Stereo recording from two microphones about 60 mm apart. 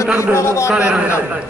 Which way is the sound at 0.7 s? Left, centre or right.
Centre.